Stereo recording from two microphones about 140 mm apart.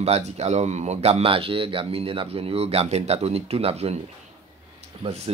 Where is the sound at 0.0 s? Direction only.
50° right (ahead or behind).